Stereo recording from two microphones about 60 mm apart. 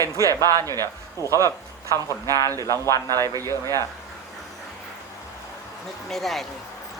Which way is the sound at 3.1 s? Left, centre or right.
Right.